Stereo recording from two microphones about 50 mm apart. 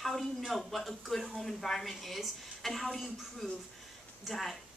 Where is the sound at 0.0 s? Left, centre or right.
Centre.